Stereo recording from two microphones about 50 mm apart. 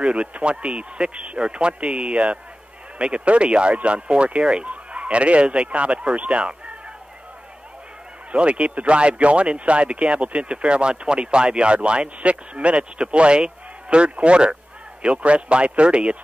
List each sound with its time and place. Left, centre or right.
0.0 s speech: right
8.3 s speech: right